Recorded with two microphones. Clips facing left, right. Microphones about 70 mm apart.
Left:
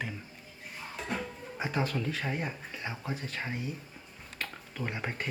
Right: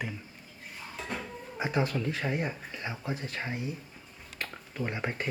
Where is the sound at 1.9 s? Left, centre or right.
Centre.